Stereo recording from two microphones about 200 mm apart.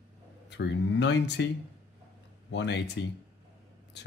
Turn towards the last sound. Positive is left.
turn(degrees=60)  # may be behind; listen again after turning